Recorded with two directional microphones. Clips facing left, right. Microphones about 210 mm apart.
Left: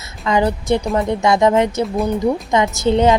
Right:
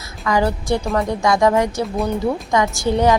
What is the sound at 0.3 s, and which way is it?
A woman's voice, 20° left (ahead or behind).